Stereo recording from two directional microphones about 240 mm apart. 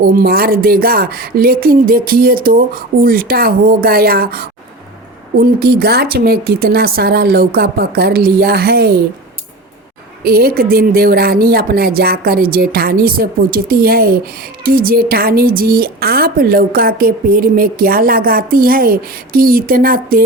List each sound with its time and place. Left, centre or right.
0.0 s a woman's voice: right
10.2 s a woman's voice: right